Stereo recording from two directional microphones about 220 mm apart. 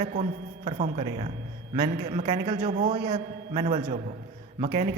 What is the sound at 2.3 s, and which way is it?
A man's voice, 20° right (ahead or behind).